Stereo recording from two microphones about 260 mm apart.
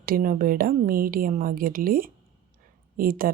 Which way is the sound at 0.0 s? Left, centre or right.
Right.